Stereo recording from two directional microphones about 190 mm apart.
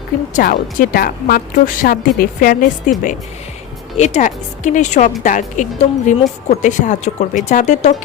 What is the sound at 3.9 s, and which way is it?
Speech, 35° left (ahead or behind).